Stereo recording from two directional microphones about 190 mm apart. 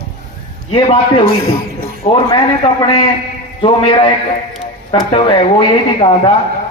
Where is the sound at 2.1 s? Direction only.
30° left (ahead or behind).